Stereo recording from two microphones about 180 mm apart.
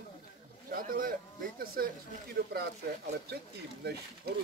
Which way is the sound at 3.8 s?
65° right (ahead or behind).